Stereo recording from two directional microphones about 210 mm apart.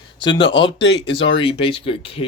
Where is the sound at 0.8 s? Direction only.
55° left (ahead or behind).